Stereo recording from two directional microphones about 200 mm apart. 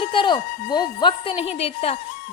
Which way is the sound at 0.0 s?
25° left (ahead or behind).